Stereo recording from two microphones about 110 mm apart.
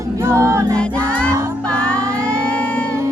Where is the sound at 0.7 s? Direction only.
10° left (ahead or behind).